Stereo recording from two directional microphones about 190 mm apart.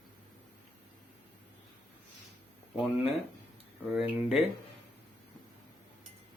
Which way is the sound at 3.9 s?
Centre (ahead or behind).